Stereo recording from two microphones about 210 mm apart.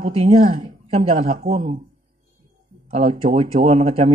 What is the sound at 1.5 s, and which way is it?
Speech, 40° right (ahead or behind).